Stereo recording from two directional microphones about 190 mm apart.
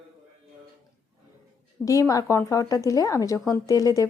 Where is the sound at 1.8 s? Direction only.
20° left (ahead or behind).